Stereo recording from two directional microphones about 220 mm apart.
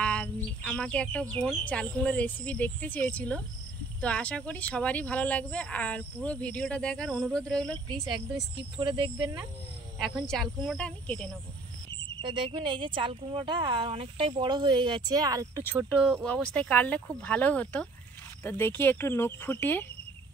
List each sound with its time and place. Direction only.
0.0 s bird: 5° left (ahead or behind)
1.3 s speech: 5° left (ahead or behind)
8.1 s speech: 20° right (ahead or behind)
9.9 s speech: centre (ahead or behind)
12.2 s speech: 20° right (ahead or behind)
16.1 s speech: 5° left (ahead or behind)